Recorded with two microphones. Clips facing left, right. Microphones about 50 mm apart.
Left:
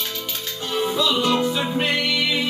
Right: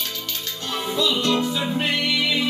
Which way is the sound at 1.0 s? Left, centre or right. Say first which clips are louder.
Even; centre.